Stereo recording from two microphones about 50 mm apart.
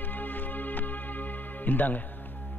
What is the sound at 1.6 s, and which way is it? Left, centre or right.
Music, left.